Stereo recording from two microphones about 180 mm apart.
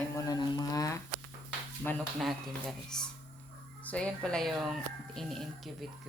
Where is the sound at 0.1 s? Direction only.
20° left (ahead or behind).